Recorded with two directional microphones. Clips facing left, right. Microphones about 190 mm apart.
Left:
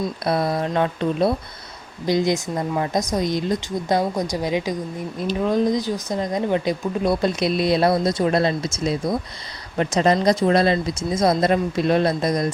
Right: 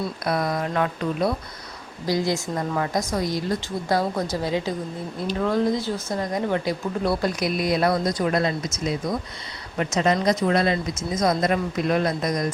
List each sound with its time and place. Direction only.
0.3 s speech: 30° left (ahead or behind)